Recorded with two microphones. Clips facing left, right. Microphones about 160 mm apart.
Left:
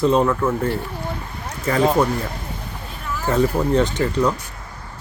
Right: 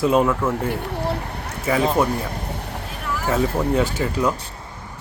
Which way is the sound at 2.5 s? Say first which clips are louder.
Right 3 dB; 65° right (ahead or behind).